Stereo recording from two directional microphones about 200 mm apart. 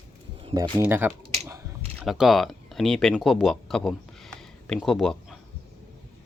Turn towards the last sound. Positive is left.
turn(degrees=0)  # may be behind; listen again after turning